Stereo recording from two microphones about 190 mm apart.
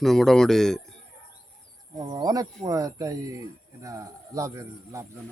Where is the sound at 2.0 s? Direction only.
20° right (ahead or behind).